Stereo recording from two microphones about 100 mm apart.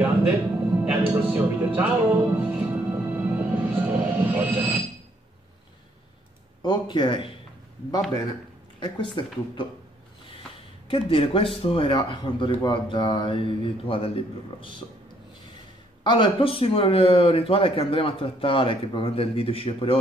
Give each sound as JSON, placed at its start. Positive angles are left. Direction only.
{"t": 0.8, "sound": "music", "side_deg": -15}
{"t": 6.6, "sound": "speech", "side_deg": 50}
{"t": 8.7, "sound": "speech", "side_deg": 55}
{"t": 10.9, "sound": "speech", "side_deg": 65}
{"t": 11.9, "sound": "speech", "side_deg": 55}
{"t": 16.0, "sound": "speech", "side_deg": 50}